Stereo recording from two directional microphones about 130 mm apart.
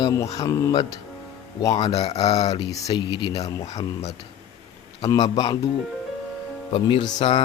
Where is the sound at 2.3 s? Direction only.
30° left (ahead or behind).